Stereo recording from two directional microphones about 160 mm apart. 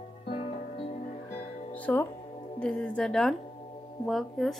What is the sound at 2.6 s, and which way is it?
Speech, 5° left (ahead or behind).